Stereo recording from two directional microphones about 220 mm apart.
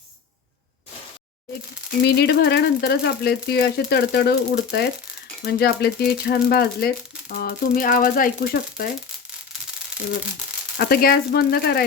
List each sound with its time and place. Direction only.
2.0 s speech: 50° left (ahead or behind)
10.8 s speech: 45° left (ahead or behind)